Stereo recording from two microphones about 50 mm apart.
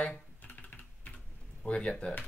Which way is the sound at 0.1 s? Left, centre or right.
Left.